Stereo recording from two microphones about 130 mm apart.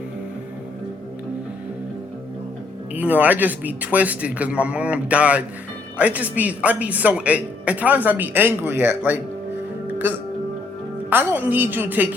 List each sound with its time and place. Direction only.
2.9 s speech: 10° right (ahead or behind)